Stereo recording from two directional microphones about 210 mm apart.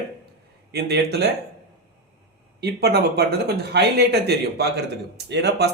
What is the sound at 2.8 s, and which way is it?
Speech, 50° right (ahead or behind).